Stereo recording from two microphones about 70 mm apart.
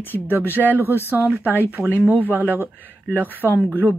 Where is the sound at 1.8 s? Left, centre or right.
Centre.